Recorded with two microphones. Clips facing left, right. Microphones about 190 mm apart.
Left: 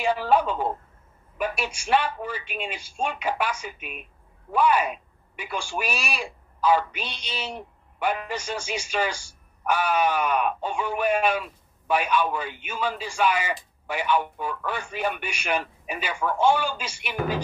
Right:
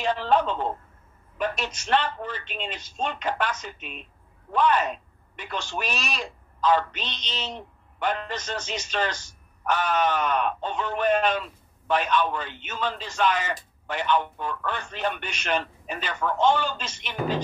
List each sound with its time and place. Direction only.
0.0 s speech: 10° left (ahead or behind)